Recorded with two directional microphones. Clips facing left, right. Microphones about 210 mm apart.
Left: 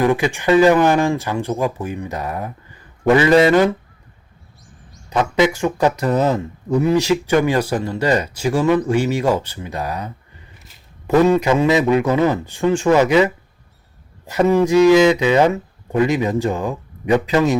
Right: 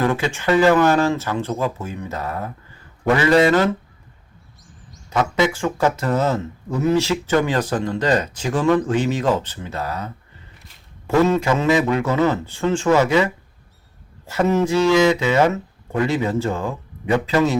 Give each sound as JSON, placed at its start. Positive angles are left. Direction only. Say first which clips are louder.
{"t": 0.0, "sound": "speech", "louder": "left 3 dB", "side_deg": 15}
{"t": 5.0, "sound": "speech", "louder": "left 3 dB", "side_deg": 15}